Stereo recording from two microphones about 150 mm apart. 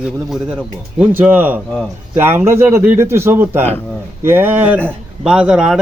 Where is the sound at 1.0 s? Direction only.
10° right (ahead or behind).